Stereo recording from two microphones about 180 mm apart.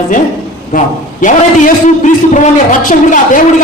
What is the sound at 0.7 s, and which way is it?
A man's voice, 45° left (ahead or behind).